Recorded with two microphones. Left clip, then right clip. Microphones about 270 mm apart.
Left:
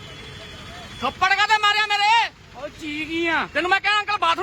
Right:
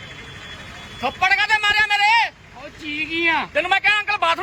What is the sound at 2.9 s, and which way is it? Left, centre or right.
Speech, centre.